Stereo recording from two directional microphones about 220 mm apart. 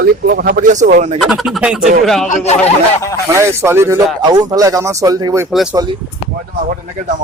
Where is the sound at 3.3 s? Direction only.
10° right (ahead or behind).